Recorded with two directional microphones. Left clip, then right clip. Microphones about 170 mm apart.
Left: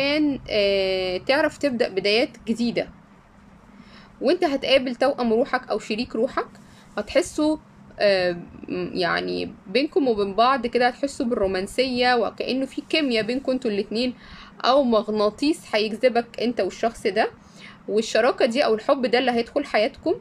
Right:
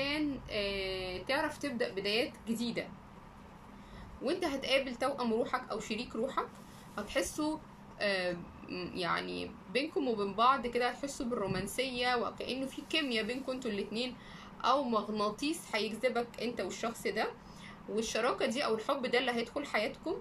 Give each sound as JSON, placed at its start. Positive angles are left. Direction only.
{"t": 0.0, "sound": "speech", "side_deg": 65}
{"t": 4.2, "sound": "speech", "side_deg": 55}